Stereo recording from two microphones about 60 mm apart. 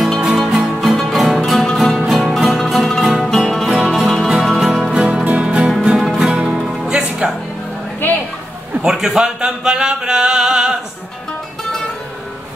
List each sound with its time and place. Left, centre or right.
0.2 s music: centre
3.0 s music: centre
4.9 s music: centre
8.8 s a sound: centre